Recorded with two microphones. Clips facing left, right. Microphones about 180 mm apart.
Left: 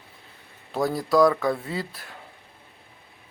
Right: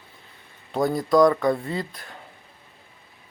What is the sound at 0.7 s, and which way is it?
Speech, centre (ahead or behind).